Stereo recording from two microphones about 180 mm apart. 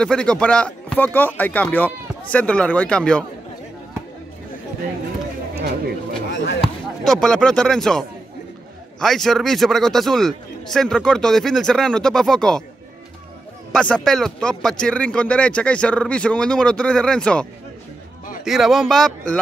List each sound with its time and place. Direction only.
0.0 s speech: 5° left (ahead or behind)
5.5 s a sound: 60° right (ahead or behind)
6.3 s basketball bounce: 70° left (ahead or behind)
6.6 s speech: 5° left (ahead or behind)
9.0 s speech: centre (ahead or behind)
13.7 s speech: 5° left (ahead or behind)